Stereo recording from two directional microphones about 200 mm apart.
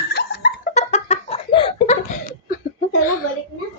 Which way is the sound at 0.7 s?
35° left (ahead or behind).